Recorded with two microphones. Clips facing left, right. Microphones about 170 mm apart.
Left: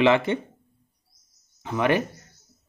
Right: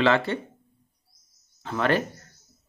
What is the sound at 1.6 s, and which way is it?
Speech, 15° left (ahead or behind).